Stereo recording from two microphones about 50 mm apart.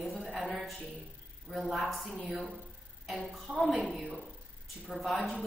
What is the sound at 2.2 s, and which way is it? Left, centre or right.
Speech, centre.